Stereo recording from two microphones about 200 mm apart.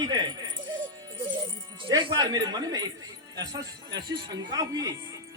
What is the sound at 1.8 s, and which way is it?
Speech, 25° right (ahead or behind).